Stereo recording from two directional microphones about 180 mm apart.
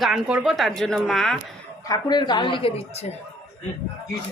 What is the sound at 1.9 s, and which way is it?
Speech, 25° left (ahead or behind).